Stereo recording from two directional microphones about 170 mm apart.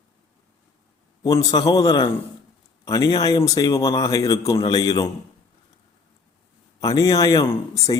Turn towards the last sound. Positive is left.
turn(degrees=20)  # may be behind; listen again after turning